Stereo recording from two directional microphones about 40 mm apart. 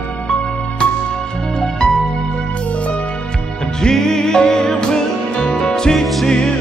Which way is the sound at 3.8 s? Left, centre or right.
Centre.